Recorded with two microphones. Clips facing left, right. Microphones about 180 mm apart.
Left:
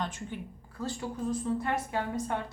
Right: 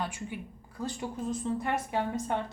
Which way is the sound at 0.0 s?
10° right (ahead or behind).